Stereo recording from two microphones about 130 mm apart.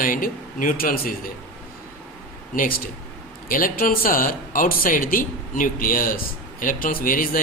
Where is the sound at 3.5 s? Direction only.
90° left.